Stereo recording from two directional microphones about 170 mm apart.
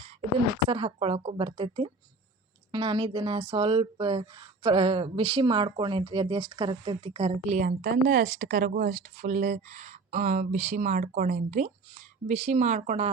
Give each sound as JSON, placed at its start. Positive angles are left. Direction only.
{"t": 0.7, "sound": "speech", "side_deg": -30}